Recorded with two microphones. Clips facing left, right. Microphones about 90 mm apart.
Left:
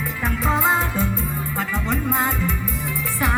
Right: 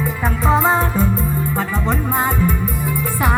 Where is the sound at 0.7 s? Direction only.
40° right (ahead or behind).